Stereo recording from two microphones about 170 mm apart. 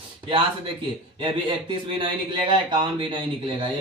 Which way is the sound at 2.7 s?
30° right (ahead or behind).